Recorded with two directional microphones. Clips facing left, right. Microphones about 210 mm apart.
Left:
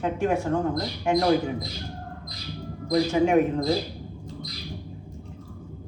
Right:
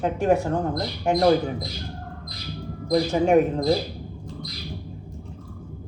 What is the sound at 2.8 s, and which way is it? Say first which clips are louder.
Speech: right 1 dB; 35° right (ahead or behind).